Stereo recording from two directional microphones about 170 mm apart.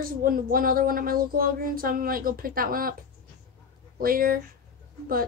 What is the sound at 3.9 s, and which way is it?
Speech, 60° right (ahead or behind).